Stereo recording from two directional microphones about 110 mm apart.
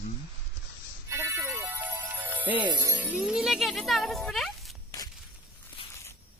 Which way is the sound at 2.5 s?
45° right (ahead or behind).